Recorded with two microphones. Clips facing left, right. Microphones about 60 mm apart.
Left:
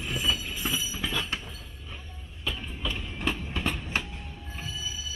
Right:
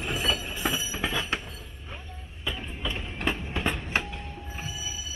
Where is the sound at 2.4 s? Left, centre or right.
Centre.